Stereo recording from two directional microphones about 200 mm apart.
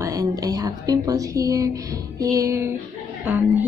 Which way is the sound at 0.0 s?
15° right (ahead or behind).